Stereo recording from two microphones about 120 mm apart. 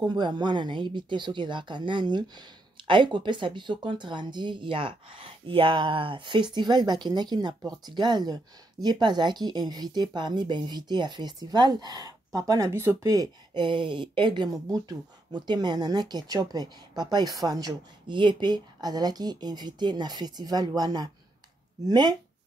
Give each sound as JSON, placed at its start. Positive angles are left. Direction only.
{"t": 0.0, "sound": "speech", "side_deg": -35}